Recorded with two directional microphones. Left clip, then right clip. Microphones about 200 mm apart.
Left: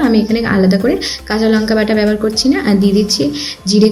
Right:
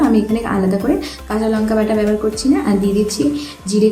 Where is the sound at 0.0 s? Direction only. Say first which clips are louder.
Left 2 dB; 10° left (ahead or behind).